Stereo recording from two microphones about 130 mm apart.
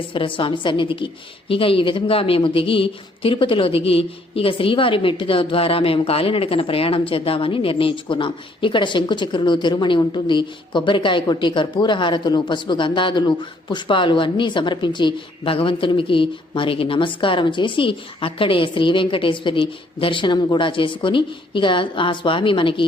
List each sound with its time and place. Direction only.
0.1 s a woman's voice: 40° left (ahead or behind)